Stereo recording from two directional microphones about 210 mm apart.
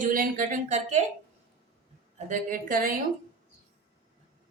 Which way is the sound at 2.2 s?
40° right (ahead or behind).